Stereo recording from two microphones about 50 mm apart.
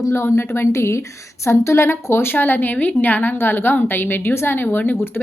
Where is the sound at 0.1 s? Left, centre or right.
Left.